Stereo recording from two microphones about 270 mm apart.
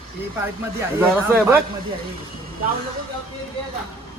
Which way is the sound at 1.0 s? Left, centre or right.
Centre.